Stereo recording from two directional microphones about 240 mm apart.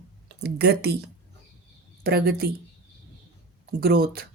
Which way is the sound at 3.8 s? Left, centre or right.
Right.